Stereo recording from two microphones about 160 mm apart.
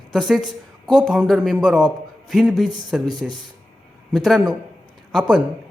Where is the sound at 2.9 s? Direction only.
Centre (ahead or behind).